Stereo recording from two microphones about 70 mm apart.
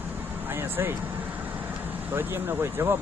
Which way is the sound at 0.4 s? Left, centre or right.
Right.